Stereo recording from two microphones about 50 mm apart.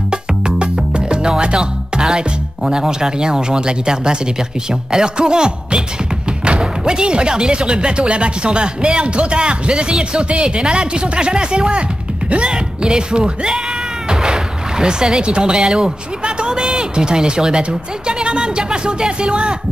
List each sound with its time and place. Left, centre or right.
0.1 s music: centre
4.6 s speech: centre